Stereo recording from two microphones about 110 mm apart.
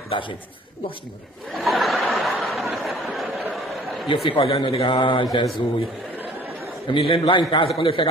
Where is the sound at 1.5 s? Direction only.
Centre (ahead or behind).